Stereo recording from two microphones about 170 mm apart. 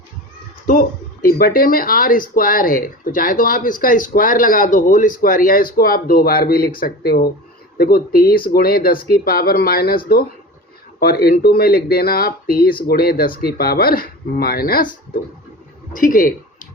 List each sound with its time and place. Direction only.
0.7 s speech: 55° left (ahead or behind)
11.0 s speech: 65° left (ahead or behind)
16.0 s speech: 55° left (ahead or behind)